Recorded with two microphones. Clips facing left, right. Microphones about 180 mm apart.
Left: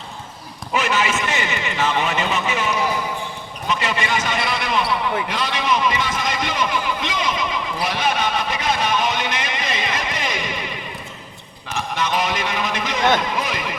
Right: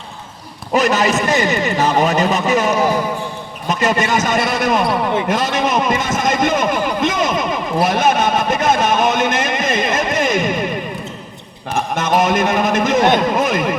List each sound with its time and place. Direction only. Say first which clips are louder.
0.7 s a man's voice: right 6 dB; 40° right (ahead or behind)